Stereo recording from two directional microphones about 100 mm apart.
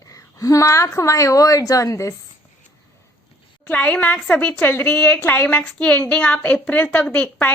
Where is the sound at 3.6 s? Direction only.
15° left (ahead or behind).